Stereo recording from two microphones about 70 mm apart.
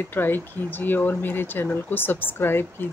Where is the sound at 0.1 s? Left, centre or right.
Left.